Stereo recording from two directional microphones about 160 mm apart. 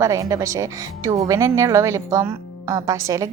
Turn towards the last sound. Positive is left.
turn(degrees=-20)  # may be behind; listen again after turning